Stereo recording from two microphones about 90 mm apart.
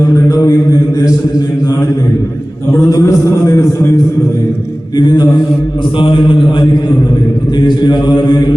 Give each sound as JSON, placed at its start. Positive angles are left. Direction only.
{"t": 0.3, "sound": "mantra", "side_deg": 45}
{"t": 2.7, "sound": "a man's voice", "side_deg": 40}
{"t": 4.9, "sound": "mantra", "side_deg": 55}
{"t": 6.0, "sound": "a man's voice", "side_deg": 65}
{"t": 7.6, "sound": "mantra", "side_deg": 55}